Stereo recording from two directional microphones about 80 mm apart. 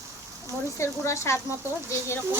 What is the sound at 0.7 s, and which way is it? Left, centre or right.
Stir, left.